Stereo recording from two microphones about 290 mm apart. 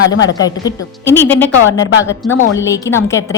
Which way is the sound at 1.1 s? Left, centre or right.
Centre.